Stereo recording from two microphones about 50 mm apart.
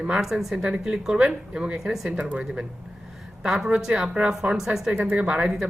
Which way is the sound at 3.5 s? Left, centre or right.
Centre.